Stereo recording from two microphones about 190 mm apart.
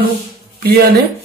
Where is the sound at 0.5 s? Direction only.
55° right (ahead or behind).